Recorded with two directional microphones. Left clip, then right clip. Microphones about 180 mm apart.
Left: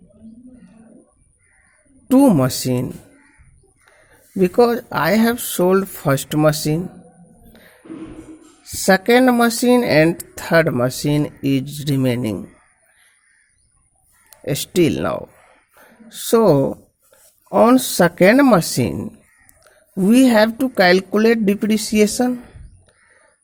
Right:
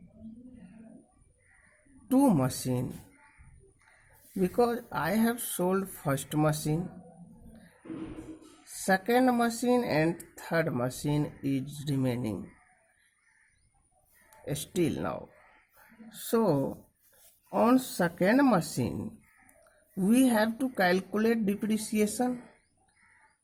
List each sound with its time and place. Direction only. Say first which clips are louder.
2.0 s speech: left 12 dB; 30° left (ahead or behind)
4.4 s speech: left 13 dB; 35° left (ahead or behind)
8.6 s speech: left 13 dB; 35° left (ahead or behind)
14.3 s speech: left 14 dB; 35° left (ahead or behind)
15.7 s a sound: left 13 dB; 35° left (ahead or behind)
17.5 s speech: left 13 dB; 35° left (ahead or behind)